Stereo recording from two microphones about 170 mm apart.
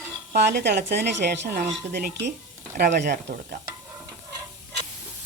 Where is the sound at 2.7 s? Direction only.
50° right (ahead or behind).